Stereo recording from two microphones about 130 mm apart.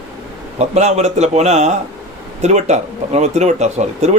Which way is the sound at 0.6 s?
60° right (ahead or behind).